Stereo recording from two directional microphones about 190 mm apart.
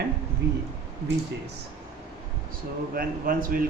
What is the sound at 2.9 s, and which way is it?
Speech, 50° right (ahead or behind).